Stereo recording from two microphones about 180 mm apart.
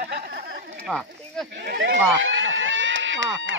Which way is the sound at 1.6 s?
80° right.